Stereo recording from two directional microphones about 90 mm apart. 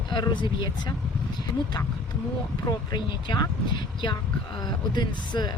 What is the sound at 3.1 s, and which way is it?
Speech, 60° left (ahead or behind).